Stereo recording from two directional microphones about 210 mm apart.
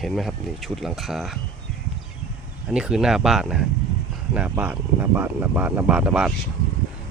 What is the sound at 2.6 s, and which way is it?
Speech, 5° right (ahead or behind).